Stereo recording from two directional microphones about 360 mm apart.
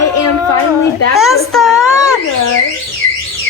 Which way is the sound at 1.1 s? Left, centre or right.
Centre.